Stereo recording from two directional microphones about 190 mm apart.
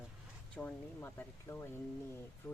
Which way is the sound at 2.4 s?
5° left (ahead or behind).